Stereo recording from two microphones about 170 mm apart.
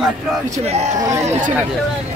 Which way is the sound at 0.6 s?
40° right (ahead or behind).